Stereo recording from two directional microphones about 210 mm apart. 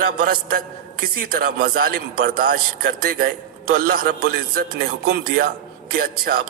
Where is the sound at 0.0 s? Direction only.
45° right (ahead or behind).